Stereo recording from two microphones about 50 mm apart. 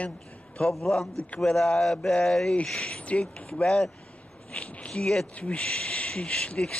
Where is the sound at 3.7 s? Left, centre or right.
Centre.